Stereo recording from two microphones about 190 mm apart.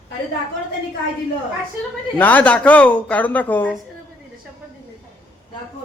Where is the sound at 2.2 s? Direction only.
10° left (ahead or behind).